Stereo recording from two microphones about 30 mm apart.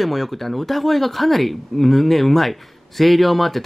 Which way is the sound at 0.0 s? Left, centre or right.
Centre.